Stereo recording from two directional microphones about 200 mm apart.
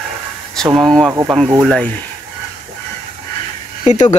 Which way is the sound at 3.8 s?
40° left (ahead or behind).